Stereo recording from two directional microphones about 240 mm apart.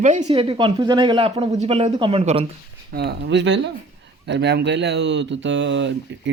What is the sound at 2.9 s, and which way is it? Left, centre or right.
Speech, right.